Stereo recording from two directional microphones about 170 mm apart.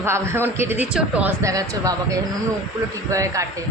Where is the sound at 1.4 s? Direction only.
20° right (ahead or behind).